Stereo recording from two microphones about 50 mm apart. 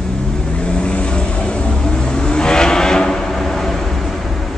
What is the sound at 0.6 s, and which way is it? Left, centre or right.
Vehicle, left.